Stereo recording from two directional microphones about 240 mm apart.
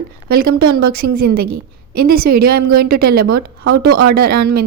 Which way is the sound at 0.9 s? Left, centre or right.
Right.